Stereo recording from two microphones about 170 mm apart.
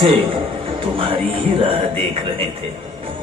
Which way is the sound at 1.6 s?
35° right (ahead or behind).